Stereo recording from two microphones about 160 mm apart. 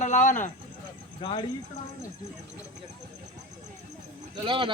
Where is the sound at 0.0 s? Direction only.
50° left (ahead or behind).